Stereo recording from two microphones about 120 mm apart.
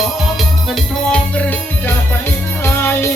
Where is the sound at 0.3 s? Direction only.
Centre (ahead or behind).